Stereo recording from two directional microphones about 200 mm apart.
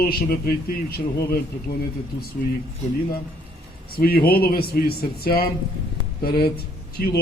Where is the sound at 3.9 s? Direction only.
50° left (ahead or behind).